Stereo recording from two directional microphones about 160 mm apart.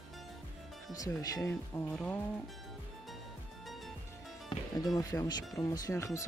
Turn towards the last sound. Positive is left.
turn(degrees=20)  # may be behind; listen again after turning